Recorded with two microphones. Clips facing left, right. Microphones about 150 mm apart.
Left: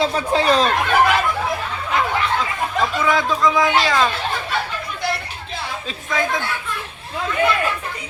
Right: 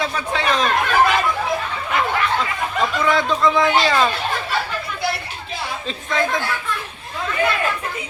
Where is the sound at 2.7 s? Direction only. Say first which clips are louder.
Even; centre (ahead or behind).